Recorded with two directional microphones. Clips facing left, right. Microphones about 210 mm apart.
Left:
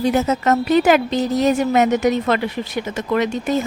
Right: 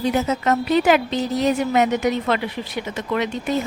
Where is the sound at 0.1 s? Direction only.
45° left (ahead or behind).